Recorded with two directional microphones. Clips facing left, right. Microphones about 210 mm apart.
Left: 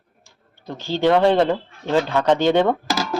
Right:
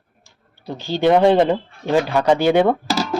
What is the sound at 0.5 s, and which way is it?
Speech, 15° right (ahead or behind).